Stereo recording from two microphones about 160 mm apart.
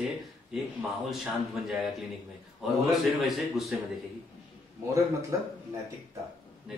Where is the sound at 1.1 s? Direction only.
Centre (ahead or behind).